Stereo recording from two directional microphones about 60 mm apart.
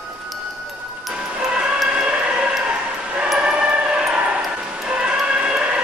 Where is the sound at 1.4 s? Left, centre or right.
Centre.